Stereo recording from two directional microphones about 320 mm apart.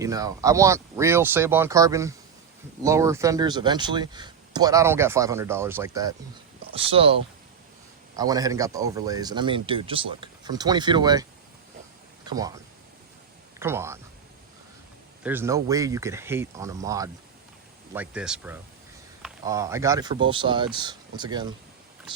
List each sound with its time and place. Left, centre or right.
0.0 s speech: centre
13.6 s speech: centre
15.2 s speech: centre